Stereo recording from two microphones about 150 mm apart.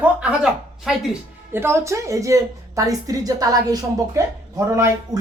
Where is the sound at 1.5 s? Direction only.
15° right (ahead or behind).